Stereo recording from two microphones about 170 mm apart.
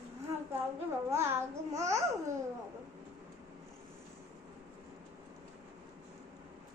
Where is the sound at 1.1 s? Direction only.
15° right (ahead or behind).